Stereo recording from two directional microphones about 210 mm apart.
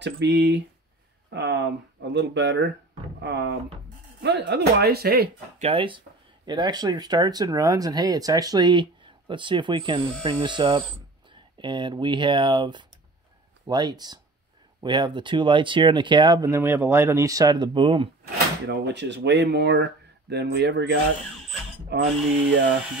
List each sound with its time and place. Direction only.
0.0 s speech: 55° right (ahead or behind)
5.6 s speech: 25° right (ahead or behind)
18.7 s speech: 55° right (ahead or behind)